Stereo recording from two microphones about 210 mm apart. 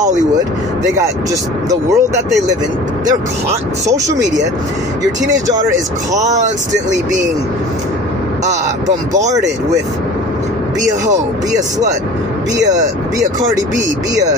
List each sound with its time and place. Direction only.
1.7 s speech: 15° right (ahead or behind)
6.1 s speech: 35° right (ahead or behind)
10.8 s speech: 35° right (ahead or behind)